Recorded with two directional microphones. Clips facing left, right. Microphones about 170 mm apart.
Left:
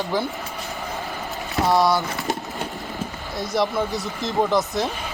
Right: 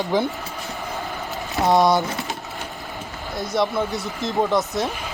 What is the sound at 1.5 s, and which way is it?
Speech, 20° right (ahead or behind).